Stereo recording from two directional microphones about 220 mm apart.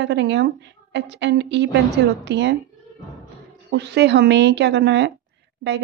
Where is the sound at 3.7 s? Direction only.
50° right (ahead or behind).